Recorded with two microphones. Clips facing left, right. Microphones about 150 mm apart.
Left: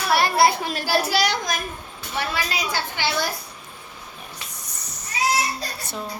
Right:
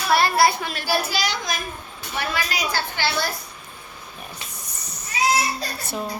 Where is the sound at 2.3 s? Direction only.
20° left (ahead or behind).